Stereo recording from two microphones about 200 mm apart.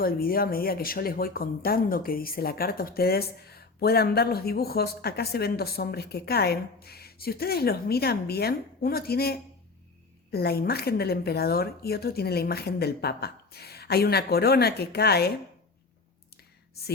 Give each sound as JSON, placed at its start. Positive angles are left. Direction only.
{"t": 0.0, "sound": "speech", "side_deg": 50}